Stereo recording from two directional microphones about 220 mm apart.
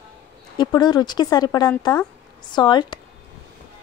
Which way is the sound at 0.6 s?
20° left (ahead or behind).